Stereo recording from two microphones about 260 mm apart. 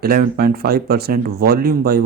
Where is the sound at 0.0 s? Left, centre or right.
Right.